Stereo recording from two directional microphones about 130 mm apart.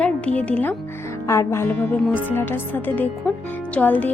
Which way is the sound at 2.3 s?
15° left (ahead or behind).